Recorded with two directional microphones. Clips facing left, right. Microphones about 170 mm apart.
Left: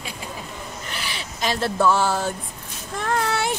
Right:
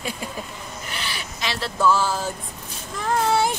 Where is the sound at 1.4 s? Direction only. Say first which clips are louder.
Left 2 dB; 50° left (ahead or behind).